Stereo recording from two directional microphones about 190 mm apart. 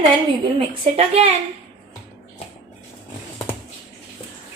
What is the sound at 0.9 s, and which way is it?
Speech, 30° right (ahead or behind).